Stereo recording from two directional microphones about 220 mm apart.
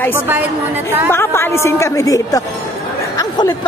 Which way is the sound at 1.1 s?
10° left (ahead or behind).